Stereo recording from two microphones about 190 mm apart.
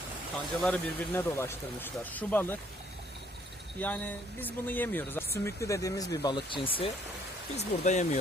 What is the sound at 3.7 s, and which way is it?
Speech, 5° left (ahead or behind).